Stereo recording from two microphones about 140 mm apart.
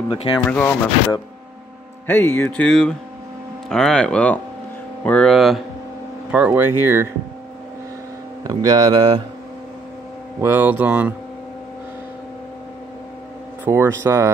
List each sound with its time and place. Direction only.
0.1 s speech: 35° left (ahead or behind)
0.4 s music: 10° left (ahead or behind)
2.0 s music: 15° left (ahead or behind)
5.0 s speech: 5° left (ahead or behind)
6.3 s speech: 10° right (ahead or behind)
8.5 s speech: 25° right (ahead or behind)
10.4 s speech: 15° right (ahead or behind)
13.7 s speech: 20° right (ahead or behind)